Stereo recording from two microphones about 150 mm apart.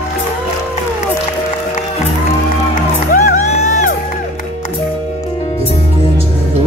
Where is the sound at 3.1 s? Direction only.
60° left (ahead or behind).